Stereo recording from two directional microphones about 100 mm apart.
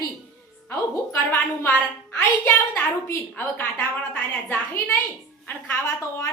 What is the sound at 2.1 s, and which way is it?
A woman's voice, 20° left (ahead or behind).